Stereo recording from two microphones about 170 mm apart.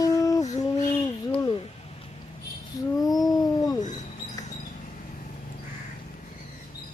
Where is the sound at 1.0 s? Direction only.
25° left (ahead or behind).